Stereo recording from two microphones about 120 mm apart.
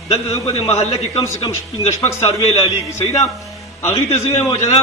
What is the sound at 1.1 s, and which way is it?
Speech, 25° left (ahead or behind).